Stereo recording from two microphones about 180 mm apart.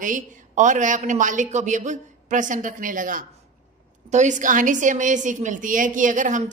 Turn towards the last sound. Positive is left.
turn(degrees=-45)  # may be behind; listen again after turning